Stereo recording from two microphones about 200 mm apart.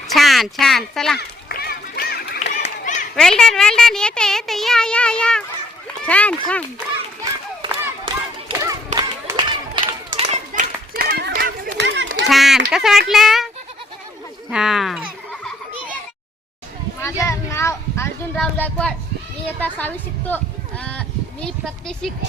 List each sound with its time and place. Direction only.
0.1 s speech: centre (ahead or behind)
1.5 s run: 50° left (ahead or behind)
2.4 s a sound: 35° left (ahead or behind)
3.2 s speech: 5° left (ahead or behind)
8.0 s hands: 25° right (ahead or behind)
9.0 s run: 20° right (ahead or behind)
10.1 s children playing: 30° right (ahead or behind)
11.2 s a sound: 55° right (ahead or behind)
12.3 s speech: centre (ahead or behind)
14.5 s speech: centre (ahead or behind)
17.0 s speech: 15° left (ahead or behind)